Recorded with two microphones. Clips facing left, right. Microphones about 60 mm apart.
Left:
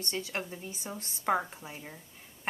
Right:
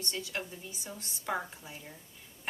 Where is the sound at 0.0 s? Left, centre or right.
Left.